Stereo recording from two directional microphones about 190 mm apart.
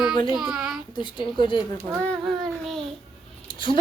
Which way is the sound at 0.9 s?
25° left (ahead or behind).